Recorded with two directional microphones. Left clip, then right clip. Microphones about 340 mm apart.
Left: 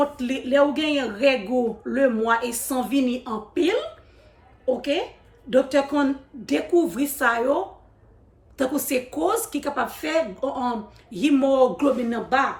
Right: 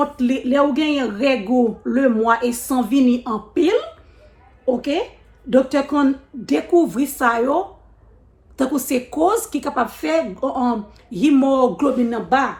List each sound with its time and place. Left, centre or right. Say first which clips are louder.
0.0 s a woman's voice: right 4 dB; centre